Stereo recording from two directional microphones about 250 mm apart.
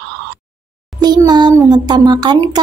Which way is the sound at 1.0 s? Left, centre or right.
Centre.